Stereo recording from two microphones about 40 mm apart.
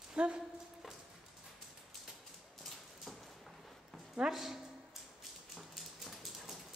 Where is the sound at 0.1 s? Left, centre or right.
Right.